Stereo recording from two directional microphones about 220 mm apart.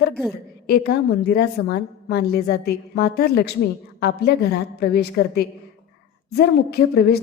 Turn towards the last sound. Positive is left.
turn(degrees=45)  # may be behind; listen again after turning